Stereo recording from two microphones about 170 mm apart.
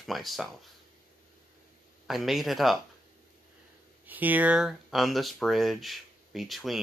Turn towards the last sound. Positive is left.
turn(degrees=0)  # may be behind; listen again after turning